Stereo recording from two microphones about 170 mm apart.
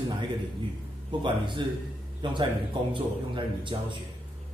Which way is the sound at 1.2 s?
30° right (ahead or behind).